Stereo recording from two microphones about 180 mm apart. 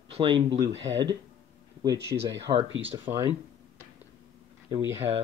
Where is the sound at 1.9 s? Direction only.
70° right (ahead or behind).